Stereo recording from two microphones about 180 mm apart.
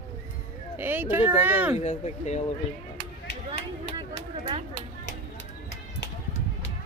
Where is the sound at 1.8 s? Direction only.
40° left (ahead or behind).